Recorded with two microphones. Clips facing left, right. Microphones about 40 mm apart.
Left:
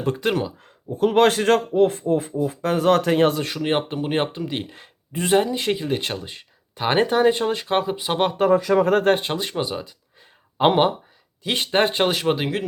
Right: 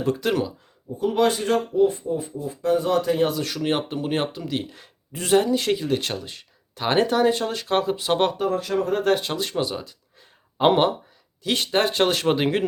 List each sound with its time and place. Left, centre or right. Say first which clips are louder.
0.0 s speech: even; left
0.6 s speech: left 4 dB; left
3.4 s speech: left 2 dB; left
9.0 s speech: left 2 dB; left
12.0 s speech: even; centre